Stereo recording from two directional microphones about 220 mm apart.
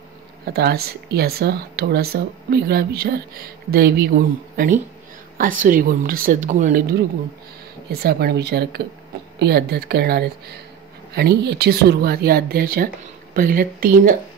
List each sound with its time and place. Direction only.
0.5 s a woman's voice: 45° right (ahead or behind)
7.9 s speech: 45° right (ahead or behind)